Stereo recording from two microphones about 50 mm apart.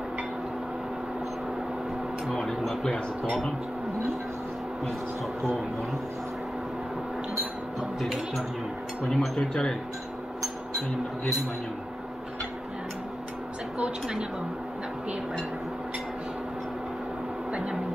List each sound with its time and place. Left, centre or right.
2.2 s speech: centre
8.0 s speech: centre
17.5 s a sound: right